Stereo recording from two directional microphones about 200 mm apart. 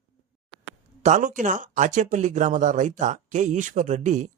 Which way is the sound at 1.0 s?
40° right (ahead or behind).